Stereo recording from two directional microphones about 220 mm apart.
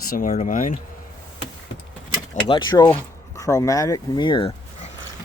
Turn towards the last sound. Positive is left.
turn(degrees=25)  # may be behind; listen again after turning